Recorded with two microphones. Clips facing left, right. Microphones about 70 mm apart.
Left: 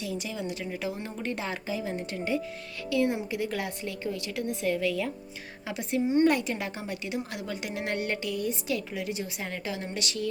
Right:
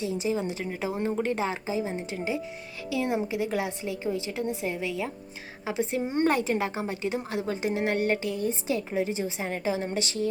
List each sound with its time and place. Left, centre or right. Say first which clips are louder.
0.0 s a woman's voice: right 6 dB; right
6.1 s a woman's voice: left 2 dB; right